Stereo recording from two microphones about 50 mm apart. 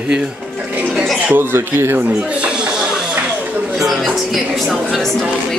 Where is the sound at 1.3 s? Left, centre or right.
Right.